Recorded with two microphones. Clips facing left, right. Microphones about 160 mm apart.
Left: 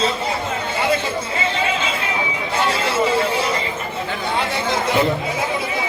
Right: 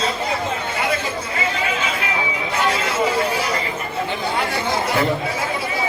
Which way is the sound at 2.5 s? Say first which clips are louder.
Left 1 dB; 30° left (ahead or behind).